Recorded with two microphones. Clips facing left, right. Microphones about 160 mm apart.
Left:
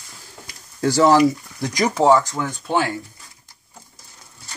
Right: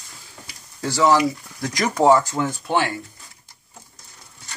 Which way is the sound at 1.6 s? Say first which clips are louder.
Left 2 dB; 20° left (ahead or behind).